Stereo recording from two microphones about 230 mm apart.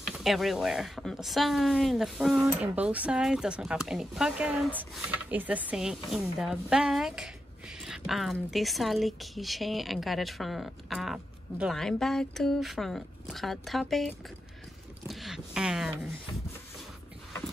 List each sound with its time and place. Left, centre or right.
0.1 s a woman's voice: centre